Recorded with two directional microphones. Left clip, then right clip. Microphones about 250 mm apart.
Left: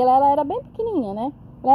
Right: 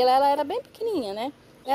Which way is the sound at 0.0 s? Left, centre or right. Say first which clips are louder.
Left 4 dB; right.